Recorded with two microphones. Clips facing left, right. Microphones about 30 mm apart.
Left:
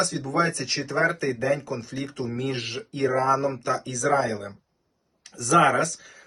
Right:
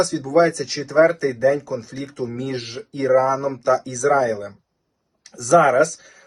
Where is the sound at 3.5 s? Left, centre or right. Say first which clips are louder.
Right 8 dB; left.